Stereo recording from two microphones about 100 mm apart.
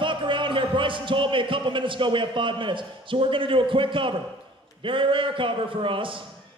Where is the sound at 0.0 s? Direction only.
55° right (ahead or behind).